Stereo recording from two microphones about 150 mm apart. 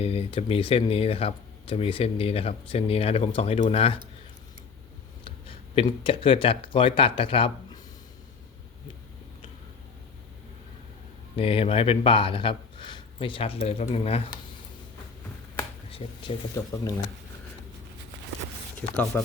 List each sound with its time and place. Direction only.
0.0 s speech: 40° left (ahead or behind)
5.2 s a sound: 35° left (ahead or behind)
6.0 s speech: 35° left (ahead or behind)
11.3 s speech: 40° left (ahead or behind)
15.9 s speech: 40° left (ahead or behind)
18.8 s speech: 10° left (ahead or behind)